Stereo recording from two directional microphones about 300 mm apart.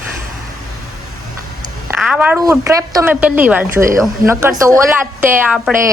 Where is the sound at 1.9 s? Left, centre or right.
Centre.